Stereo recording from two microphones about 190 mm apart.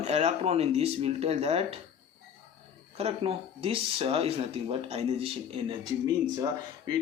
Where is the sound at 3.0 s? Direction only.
30° right (ahead or behind).